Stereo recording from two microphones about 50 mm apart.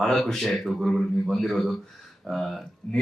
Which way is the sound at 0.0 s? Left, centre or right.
Centre.